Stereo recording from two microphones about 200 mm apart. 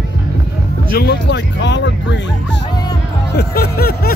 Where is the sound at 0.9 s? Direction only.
55° left (ahead or behind).